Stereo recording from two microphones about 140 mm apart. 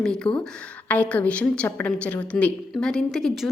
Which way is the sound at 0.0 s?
5° left (ahead or behind).